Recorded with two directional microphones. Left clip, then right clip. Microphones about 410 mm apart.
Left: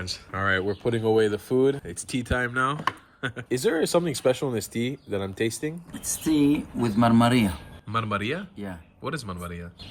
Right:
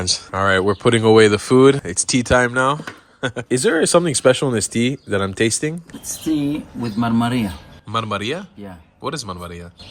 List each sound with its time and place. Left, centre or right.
0.0 s speech: centre
0.6 s speech: right
1.2 s speech: centre
3.5 s speech: right
6.4 s speech: centre